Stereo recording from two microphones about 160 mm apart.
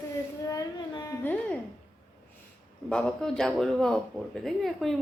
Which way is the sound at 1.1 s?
10° left (ahead or behind).